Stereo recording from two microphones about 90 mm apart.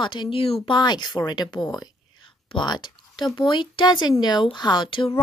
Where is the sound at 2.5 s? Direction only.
60° left (ahead or behind).